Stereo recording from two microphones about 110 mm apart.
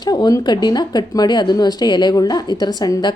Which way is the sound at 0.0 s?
35° left (ahead or behind).